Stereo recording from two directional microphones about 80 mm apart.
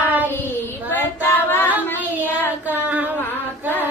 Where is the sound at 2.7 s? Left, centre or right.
Right.